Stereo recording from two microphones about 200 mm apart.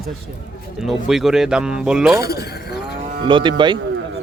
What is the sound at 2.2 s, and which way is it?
Livestock, 55° left (ahead or behind).